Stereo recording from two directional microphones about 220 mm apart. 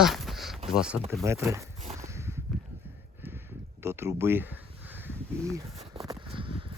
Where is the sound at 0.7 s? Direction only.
5° right (ahead or behind).